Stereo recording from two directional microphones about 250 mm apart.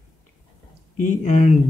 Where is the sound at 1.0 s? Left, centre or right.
Left.